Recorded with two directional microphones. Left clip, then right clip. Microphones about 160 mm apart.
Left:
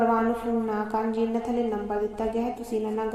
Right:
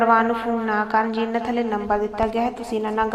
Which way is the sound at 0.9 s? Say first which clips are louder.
Right 6 dB; 5° left (ahead or behind).